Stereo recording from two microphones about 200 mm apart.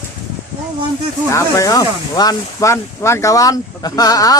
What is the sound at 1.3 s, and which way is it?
A man's voice, 15° left (ahead or behind).